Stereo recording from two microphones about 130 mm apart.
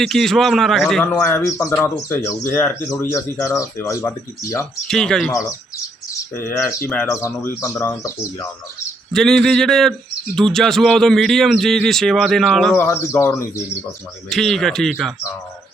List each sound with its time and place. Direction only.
0.0 s a man's voice: centre (ahead or behind)
1.0 s speech: 15° left (ahead or behind)
4.9 s a man's voice: 5° left (ahead or behind)
6.3 s speech: 20° left (ahead or behind)
9.1 s a man's voice: 5° left (ahead or behind)
12.7 s speech: 20° left (ahead or behind)
14.3 s a man's voice: centre (ahead or behind)